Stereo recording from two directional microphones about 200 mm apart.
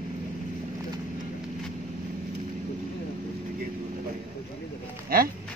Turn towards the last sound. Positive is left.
turn(degrees=-45)  # may be behind; listen again after turning